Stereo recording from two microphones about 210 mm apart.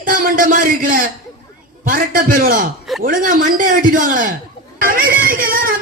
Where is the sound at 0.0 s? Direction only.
40° right (ahead or behind).